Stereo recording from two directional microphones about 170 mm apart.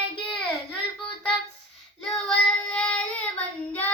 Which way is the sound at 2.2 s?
5° left (ahead or behind).